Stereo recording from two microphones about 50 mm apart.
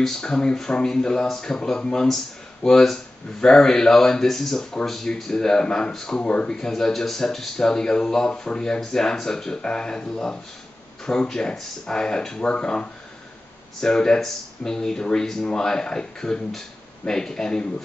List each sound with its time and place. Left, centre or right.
0.0 s speech: centre